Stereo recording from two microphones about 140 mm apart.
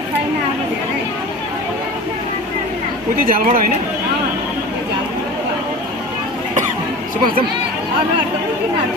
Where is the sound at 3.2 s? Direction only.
90° right.